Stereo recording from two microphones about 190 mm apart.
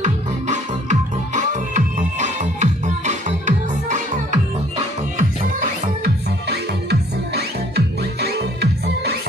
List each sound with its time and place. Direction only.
0.0 s music: 40° right (ahead or behind); by 9.1 s 60° right (ahead or behind)